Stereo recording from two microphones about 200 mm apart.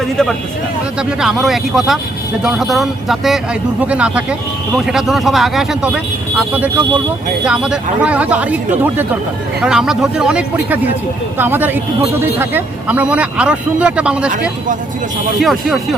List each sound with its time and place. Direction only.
0.0 s speech: centre (ahead or behind)
7.4 s speech: 5° right (ahead or behind)